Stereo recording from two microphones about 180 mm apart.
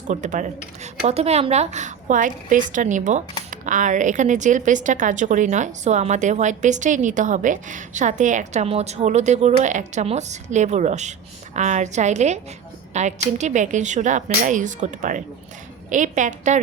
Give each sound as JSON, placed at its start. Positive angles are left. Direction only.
{"t": 0.1, "sound": "a woman's voice", "side_deg": -45}